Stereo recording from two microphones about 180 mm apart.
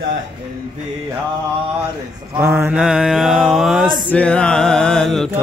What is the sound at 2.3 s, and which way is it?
Mantra, 10° right (ahead or behind).